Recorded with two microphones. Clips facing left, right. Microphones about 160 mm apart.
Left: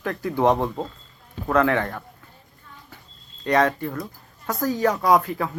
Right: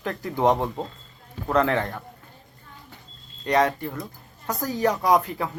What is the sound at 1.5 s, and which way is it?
Speech, 25° right (ahead or behind).